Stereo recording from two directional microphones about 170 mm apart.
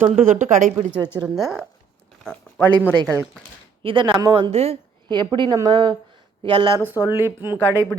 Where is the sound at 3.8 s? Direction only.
30° right (ahead or behind).